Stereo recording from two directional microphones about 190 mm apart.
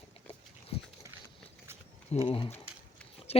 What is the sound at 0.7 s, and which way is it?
Dog, 30° left (ahead or behind).